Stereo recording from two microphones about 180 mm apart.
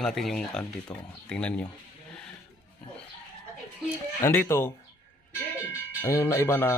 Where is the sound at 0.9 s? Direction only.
20° left (ahead or behind).